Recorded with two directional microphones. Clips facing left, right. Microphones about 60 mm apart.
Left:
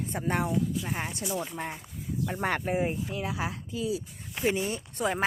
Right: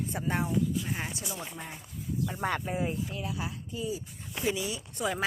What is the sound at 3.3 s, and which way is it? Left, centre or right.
Speech, left.